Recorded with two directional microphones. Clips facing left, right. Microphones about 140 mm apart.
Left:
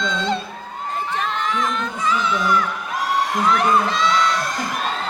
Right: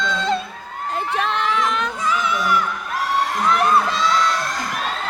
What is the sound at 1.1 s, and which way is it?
Crowd, 80° right.